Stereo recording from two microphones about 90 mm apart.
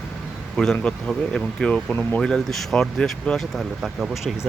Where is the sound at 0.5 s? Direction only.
5° left (ahead or behind).